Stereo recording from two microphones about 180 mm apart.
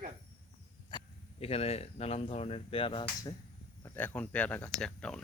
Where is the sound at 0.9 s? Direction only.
25° left (ahead or behind).